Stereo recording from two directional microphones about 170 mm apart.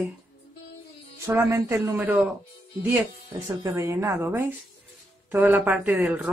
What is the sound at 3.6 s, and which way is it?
Speech, 15° right (ahead or behind).